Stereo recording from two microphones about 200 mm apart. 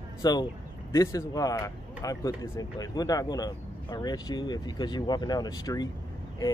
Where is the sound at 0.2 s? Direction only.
20° left (ahead or behind).